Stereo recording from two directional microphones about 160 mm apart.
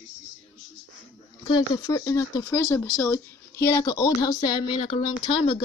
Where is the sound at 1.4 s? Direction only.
25° left (ahead or behind).